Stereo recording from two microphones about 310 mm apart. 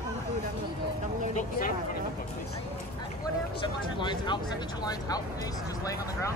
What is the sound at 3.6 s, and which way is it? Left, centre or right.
Speech, centre.